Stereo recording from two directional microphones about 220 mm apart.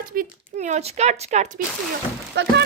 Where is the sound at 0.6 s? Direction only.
30° right (ahead or behind).